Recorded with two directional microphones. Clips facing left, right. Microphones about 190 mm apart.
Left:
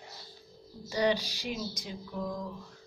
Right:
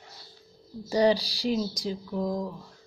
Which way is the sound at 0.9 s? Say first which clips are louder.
Right 6 dB; 35° right (ahead or behind).